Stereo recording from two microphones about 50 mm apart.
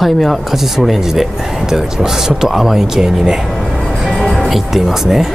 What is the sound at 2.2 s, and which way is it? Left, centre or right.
Speech, centre.